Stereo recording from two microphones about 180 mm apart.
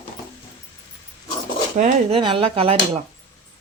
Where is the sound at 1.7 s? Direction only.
40° right (ahead or behind).